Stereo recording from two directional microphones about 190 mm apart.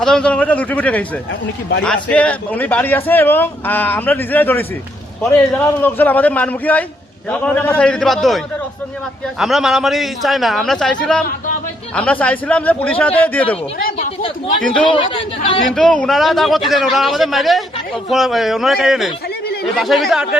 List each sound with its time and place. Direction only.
0.0 s a man's voice: 5° left (ahead or behind)
9.4 s a man's voice: centre (ahead or behind)
13.7 s a sound: 50° left (ahead or behind)
14.8 s speech: 25° left (ahead or behind)
15.7 s a man's voice: 5° left (ahead or behind)